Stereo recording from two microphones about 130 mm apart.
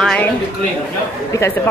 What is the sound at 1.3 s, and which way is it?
Speech, 20° left (ahead or behind).